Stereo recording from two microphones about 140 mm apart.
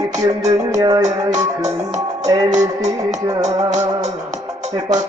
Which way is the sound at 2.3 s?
25° right (ahead or behind).